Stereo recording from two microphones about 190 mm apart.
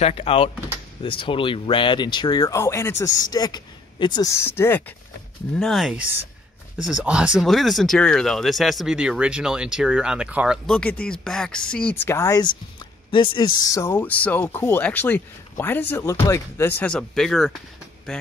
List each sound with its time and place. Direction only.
0.0 s speech: 30° left (ahead or behind); by 4.9 s 10° left (ahead or behind)
5.6 s speech: centre (ahead or behind)